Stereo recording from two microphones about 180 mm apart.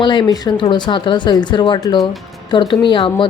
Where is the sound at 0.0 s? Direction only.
25° left (ahead or behind).